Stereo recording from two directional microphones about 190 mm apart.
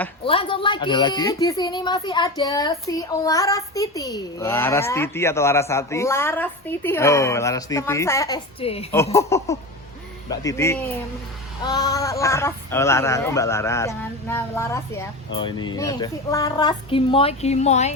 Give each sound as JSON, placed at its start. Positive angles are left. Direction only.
{"t": 0.3, "sound": "a woman's voice", "side_deg": 30}
{"t": 8.6, "sound": "a woman's voice", "side_deg": 30}
{"t": 9.1, "sound": "a woman's voice", "side_deg": 15}
{"t": 15.3, "sound": "speech", "side_deg": 25}